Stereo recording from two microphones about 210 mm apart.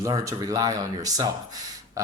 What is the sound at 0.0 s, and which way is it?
Speech, 15° right (ahead or behind).